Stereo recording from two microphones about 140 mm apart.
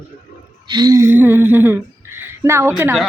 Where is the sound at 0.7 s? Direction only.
30° right (ahead or behind); by 3.0 s 10° right (ahead or behind).